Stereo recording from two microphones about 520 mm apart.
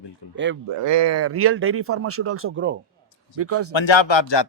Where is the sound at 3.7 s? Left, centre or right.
Left.